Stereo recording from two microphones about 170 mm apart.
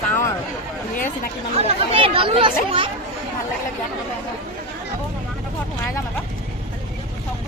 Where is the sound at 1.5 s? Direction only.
35° right (ahead or behind).